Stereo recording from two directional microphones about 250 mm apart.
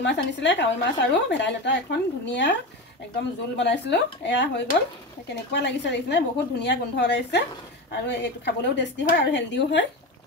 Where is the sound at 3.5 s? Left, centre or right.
Left.